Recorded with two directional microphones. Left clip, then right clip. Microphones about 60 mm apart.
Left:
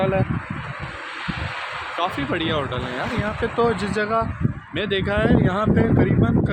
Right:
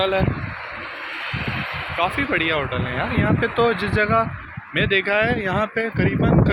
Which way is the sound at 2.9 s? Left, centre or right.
Left.